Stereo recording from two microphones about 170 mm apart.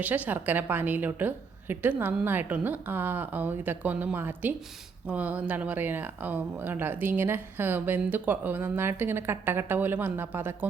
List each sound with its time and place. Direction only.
0.0 s speech: 10° right (ahead or behind)